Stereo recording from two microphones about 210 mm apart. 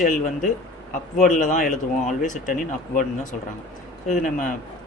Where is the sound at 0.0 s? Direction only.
40° left (ahead or behind).